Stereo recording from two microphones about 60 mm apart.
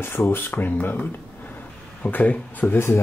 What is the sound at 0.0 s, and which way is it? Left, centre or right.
Speech, left.